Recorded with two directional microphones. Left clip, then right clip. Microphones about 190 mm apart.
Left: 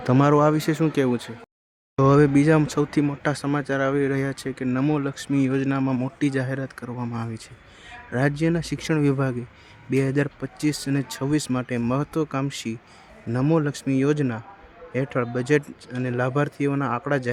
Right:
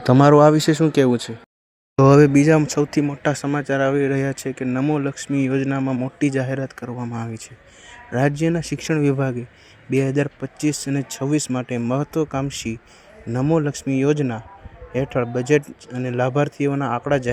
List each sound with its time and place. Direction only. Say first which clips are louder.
0.0 s a man's voice: right 6 dB; 30° right (ahead or behind); by 6.9 s 15° right (ahead or behind)
6.9 s speech: right 2 dB; 5° right (ahead or behind)